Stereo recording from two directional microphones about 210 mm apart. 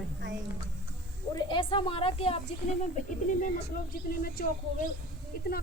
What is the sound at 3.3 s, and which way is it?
Speech, 40° left (ahead or behind).